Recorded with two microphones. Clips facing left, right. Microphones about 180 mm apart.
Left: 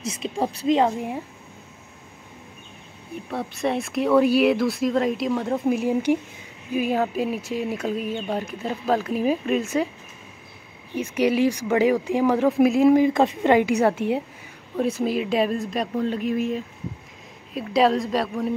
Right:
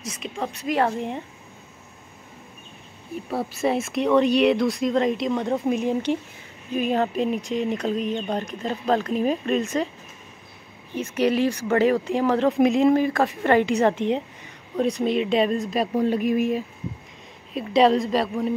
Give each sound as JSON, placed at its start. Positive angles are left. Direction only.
{"t": 0.1, "sound": "speech", "side_deg": 35}
{"t": 0.7, "sound": "a woman's voice", "side_deg": 15}
{"t": 3.3, "sound": "a woman's voice", "side_deg": 0}
{"t": 11.0, "sound": "a woman's voice", "side_deg": 10}
{"t": 12.4, "sound": "speech", "side_deg": 0}
{"t": 12.9, "sound": "a woman's voice", "side_deg": 20}
{"t": 16.0, "sound": "speech", "side_deg": -10}
{"t": 17.6, "sound": "speech", "side_deg": 0}